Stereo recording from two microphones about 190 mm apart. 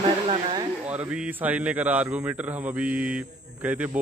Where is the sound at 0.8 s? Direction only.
5° right (ahead or behind).